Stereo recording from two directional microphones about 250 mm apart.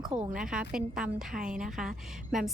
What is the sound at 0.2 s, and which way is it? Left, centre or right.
A woman's voice, centre.